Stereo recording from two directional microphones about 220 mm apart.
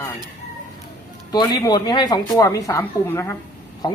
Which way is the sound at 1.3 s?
20° left (ahead or behind).